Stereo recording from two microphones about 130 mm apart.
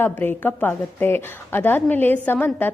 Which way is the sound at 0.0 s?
15° left (ahead or behind).